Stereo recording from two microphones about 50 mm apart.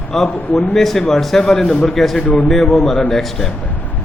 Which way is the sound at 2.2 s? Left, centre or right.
Left.